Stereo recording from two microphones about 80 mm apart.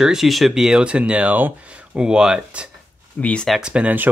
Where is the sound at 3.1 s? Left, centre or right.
Centre.